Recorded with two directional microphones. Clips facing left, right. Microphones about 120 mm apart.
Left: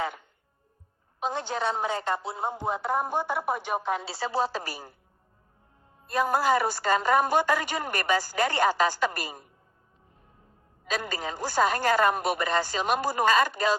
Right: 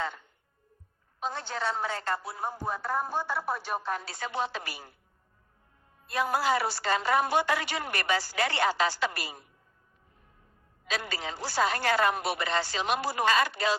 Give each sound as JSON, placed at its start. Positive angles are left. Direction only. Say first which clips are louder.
{"t": 1.2, "sound": "a woman's voice", "louder": "left 4 dB", "side_deg": 15}
{"t": 6.1, "sound": "a woman's voice", "louder": "left 3 dB", "side_deg": 45}
{"t": 10.8, "sound": "a woman's voice", "louder": "left 3 dB", "side_deg": 45}